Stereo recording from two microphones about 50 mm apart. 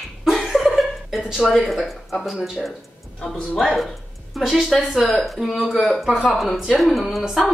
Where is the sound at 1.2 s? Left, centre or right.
Centre.